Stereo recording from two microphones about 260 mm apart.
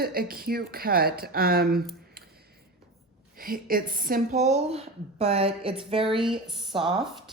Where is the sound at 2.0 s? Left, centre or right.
Right.